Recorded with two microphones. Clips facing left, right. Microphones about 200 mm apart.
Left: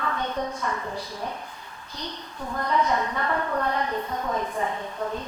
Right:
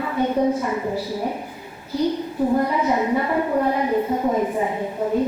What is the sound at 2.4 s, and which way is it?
Speech, 30° right (ahead or behind).